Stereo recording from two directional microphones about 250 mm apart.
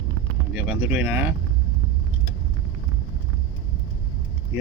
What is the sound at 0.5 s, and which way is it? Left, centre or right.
Speech, centre.